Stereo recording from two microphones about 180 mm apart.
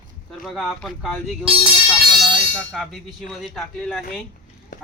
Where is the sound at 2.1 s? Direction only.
25° right (ahead or behind).